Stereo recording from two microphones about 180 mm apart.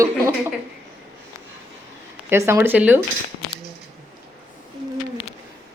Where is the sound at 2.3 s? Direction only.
15° right (ahead or behind).